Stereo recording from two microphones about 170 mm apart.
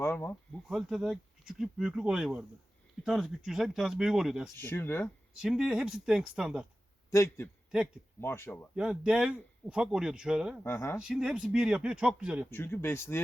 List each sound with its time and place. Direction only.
0.0 s speech: 15° left (ahead or behind)
0.7 s speech: centre (ahead or behind)
4.5 s speech: 15° left (ahead or behind)
5.4 s speech: centre (ahead or behind)
7.1 s speech: 15° left (ahead or behind)
8.7 s speech: 5° right (ahead or behind)
10.6 s speech: 15° left (ahead or behind)
11.1 s speech: 5° right (ahead or behind)
12.5 s speech: 10° left (ahead or behind)